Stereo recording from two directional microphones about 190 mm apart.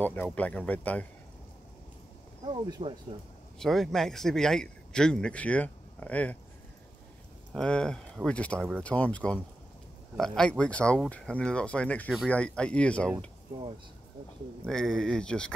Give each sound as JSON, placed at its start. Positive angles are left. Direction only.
{"t": 0.0, "sound": "speech", "side_deg": 10}
{"t": 2.4, "sound": "speech", "side_deg": -25}
{"t": 3.5, "sound": "speech", "side_deg": 0}
{"t": 7.5, "sound": "speech", "side_deg": 5}
{"t": 14.7, "sound": "speech", "side_deg": 0}